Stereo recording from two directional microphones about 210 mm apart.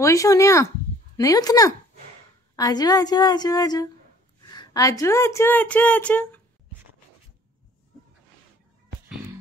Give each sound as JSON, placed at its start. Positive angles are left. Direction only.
{"t": 0.0, "sound": "a woman's voice", "side_deg": 15}